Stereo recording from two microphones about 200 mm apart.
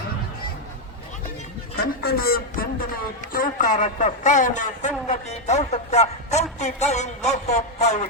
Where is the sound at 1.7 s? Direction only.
50° left (ahead or behind).